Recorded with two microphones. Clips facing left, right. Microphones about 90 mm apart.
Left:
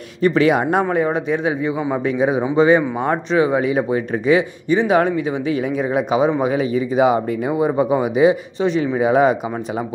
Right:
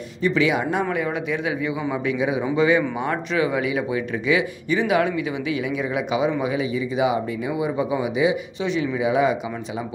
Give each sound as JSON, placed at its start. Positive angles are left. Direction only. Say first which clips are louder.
{"t": 0.2, "sound": "speech", "louder": "left 5 dB", "side_deg": 45}
{"t": 0.8, "sound": "speech", "louder": "left 6 dB", "side_deg": 35}